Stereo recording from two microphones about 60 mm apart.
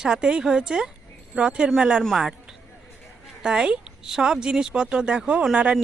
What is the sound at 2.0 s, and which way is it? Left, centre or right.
Speech, centre.